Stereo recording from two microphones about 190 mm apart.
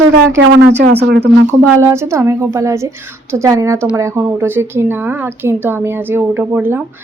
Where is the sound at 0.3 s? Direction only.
75° right (ahead or behind); by 1.5 s 60° right (ahead or behind).